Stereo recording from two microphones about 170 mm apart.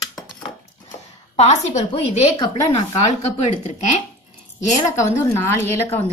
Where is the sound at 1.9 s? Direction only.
25° left (ahead or behind).